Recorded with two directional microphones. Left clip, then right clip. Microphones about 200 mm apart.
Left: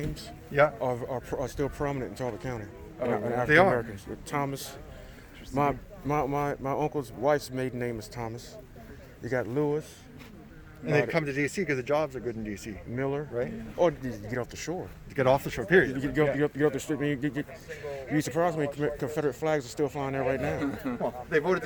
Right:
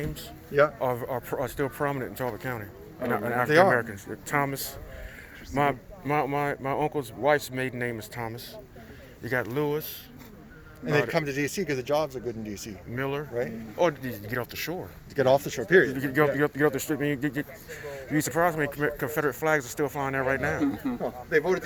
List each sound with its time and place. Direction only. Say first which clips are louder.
0.0 s speech: right 2 dB; 10° right (ahead or behind)
5.5 s speech: right 2 dB; 10° right (ahead or behind)
10.8 s speech: right 1 dB; 10° right (ahead or behind)
13.7 s speech: even; centre (ahead or behind)
15.1 s speech: right 2 dB; 20° left (ahead or behind)
16.0 s speech: right 2 dB; 10° right (ahead or behind)
20.7 s a man's voice: right 3 dB; 60° left (ahead or behind)
21.0 s speech: right 2 dB; 10° left (ahead or behind)